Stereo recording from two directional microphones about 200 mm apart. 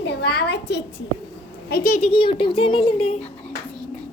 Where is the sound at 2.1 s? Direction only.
25° left (ahead or behind).